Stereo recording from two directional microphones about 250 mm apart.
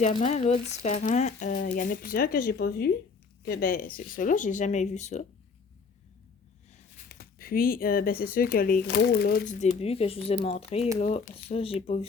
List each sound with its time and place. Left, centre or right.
0.0 s speech: left
6.9 s speech: left